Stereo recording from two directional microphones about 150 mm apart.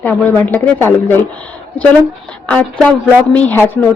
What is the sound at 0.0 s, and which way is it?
Speech, 10° left (ahead or behind).